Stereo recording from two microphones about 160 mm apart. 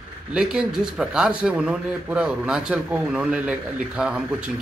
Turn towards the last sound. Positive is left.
turn(degrees=-5)  # may be behind; listen again after turning